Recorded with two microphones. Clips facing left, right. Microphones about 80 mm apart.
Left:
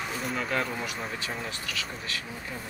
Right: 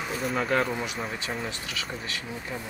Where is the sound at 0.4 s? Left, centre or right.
Right.